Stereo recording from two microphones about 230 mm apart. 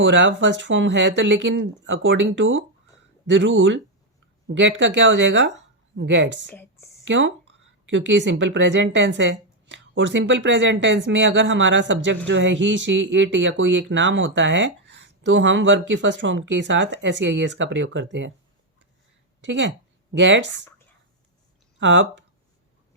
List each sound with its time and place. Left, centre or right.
0.0 s a woman's voice: right
6.5 s a sound: centre
7.0 s a woman's voice: right
19.5 s a woman's voice: right
21.8 s speech: right